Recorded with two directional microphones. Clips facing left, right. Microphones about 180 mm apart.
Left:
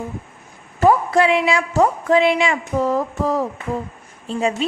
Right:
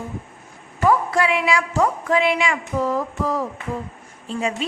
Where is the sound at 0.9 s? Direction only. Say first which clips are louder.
Left 4 dB; 25° left (ahead or behind).